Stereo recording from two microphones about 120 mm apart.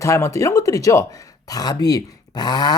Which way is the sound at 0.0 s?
25° left (ahead or behind).